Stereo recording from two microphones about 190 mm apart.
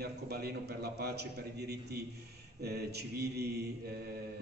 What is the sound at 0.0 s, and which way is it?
A man's voice, 55° right (ahead or behind).